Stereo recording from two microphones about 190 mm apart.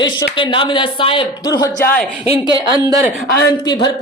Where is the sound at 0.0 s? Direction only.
25° left (ahead or behind).